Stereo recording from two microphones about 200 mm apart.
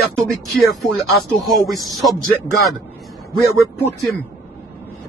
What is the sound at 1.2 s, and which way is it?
Speech, centre (ahead or behind).